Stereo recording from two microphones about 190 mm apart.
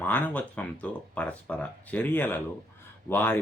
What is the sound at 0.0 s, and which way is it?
Speech, 10° left (ahead or behind).